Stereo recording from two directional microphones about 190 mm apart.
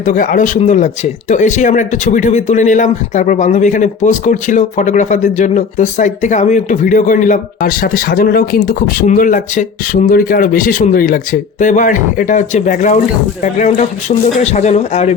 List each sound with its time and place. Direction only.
0.0 s speech: 45° left (ahead or behind)